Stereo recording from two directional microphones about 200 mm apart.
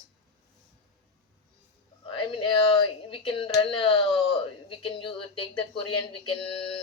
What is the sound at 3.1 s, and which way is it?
Speech, 25° left (ahead or behind).